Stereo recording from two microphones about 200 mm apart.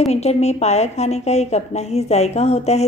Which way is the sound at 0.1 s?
30° left (ahead or behind).